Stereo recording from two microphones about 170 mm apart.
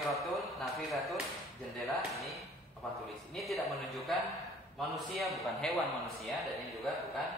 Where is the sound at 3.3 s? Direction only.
Centre (ahead or behind).